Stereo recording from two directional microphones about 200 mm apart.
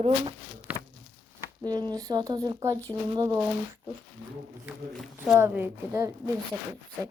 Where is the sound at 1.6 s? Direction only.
20° right (ahead or behind).